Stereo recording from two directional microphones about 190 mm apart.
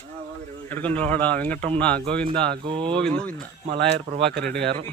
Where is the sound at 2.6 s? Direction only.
25° right (ahead or behind).